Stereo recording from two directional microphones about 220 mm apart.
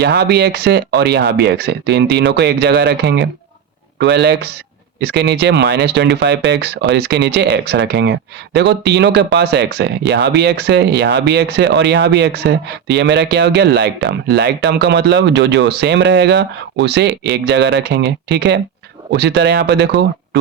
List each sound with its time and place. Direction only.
0.0 s speech: 50° right (ahead or behind)